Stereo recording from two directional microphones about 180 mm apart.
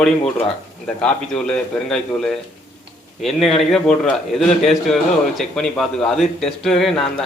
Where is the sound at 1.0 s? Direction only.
5° left (ahead or behind).